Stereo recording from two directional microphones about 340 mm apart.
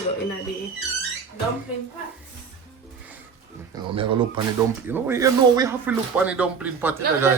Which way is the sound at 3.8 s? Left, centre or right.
Centre.